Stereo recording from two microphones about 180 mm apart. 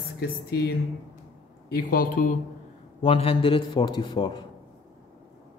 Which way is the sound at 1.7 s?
55° left (ahead or behind).